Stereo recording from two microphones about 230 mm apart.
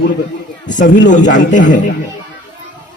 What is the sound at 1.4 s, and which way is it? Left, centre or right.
Speech, left.